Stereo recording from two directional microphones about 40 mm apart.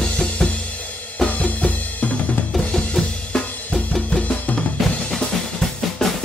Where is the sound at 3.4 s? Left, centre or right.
Left.